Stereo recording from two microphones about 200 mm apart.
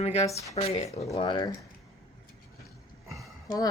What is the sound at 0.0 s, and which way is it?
A woman's voice, 30° left (ahead or behind).